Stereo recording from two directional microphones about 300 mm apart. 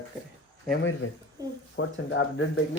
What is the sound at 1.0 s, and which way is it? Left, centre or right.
Speech, left.